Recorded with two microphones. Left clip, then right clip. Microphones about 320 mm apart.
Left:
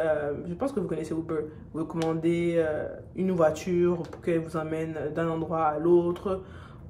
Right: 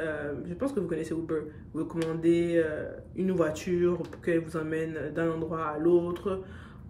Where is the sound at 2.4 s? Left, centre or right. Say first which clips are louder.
Even; left.